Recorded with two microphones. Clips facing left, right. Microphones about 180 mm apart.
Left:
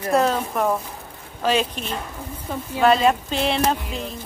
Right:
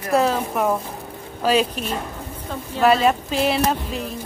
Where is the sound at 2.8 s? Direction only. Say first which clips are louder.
Even; 5° right (ahead or behind).